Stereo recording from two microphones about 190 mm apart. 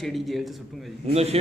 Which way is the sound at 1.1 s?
35° right (ahead or behind).